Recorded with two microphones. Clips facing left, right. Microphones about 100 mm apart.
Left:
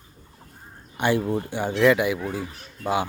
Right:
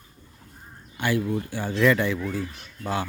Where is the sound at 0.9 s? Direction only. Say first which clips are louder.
Left 3 dB; 25° left (ahead or behind).